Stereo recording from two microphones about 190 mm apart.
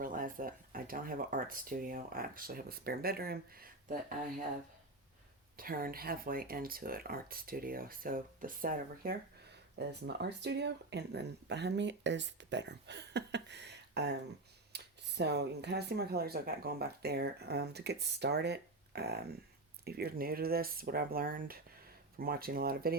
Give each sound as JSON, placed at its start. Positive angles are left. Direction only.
{"t": 0.0, "sound": "speech", "side_deg": -45}
{"t": 5.5, "sound": "speech", "side_deg": -50}
{"t": 9.7, "sound": "speech", "side_deg": -60}
{"t": 14.7, "sound": "computer keyboard", "side_deg": -60}
{"t": 15.2, "sound": "speech", "side_deg": -60}